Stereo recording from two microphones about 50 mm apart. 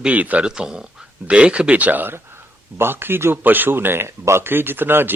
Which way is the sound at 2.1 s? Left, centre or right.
Right.